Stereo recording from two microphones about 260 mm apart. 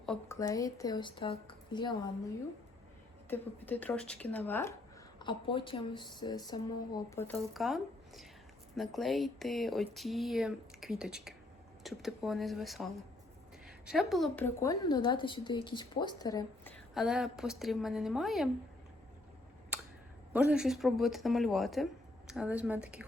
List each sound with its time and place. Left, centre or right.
0.0 s a sound: centre
0.3 s speech: centre
3.2 s speech: centre
5.2 s a woman's voice: centre
20.3 s a woman's voice: centre